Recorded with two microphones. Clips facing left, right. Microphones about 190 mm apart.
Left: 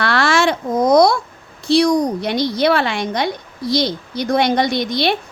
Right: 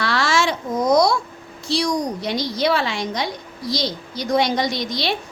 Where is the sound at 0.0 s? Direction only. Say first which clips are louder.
Left 4 dB; 60° left (ahead or behind).